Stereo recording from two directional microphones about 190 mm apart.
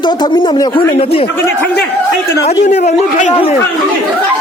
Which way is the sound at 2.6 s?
40° left (ahead or behind).